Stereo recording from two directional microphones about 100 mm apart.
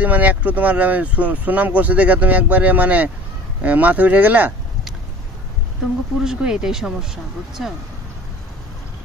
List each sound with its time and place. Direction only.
0.0 s speech: 15° right (ahead or behind)
6.2 s speech: 5° right (ahead or behind)